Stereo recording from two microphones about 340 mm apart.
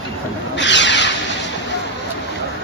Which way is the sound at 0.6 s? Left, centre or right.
Left.